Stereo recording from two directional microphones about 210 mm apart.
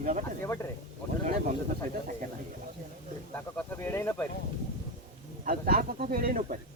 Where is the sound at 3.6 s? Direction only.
10° left (ahead or behind).